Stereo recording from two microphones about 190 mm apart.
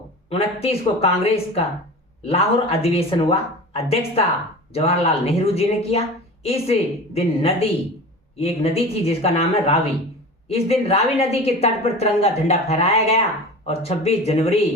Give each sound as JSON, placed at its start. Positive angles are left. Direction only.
{"t": 0.3, "sound": "a woman's voice", "side_deg": 30}